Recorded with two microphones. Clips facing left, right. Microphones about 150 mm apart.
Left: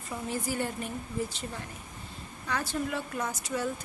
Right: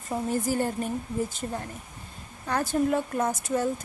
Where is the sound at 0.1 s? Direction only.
45° right (ahead or behind).